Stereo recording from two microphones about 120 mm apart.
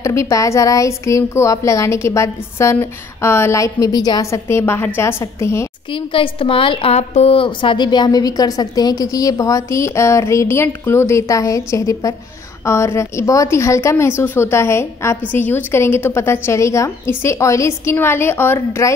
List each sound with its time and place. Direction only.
0.0 s a woman's voice: 25° left (ahead or behind)
5.9 s a woman's voice: 45° left (ahead or behind); by 18.9 s 20° left (ahead or behind)